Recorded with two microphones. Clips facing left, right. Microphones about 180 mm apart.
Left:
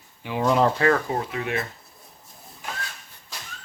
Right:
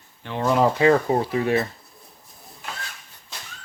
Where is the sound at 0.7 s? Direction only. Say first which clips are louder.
Right 4 dB; 20° right (ahead or behind).